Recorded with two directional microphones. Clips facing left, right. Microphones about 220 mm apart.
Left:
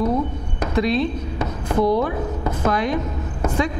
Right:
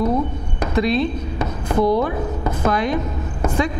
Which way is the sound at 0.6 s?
10° right (ahead or behind).